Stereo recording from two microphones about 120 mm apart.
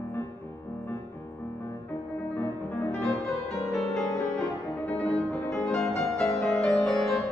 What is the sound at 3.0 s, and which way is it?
Music, centre (ahead or behind).